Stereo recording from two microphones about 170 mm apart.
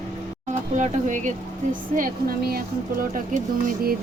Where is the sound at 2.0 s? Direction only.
60° right (ahead or behind).